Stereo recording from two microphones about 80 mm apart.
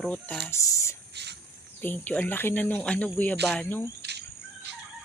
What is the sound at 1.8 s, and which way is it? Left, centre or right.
Speech, left.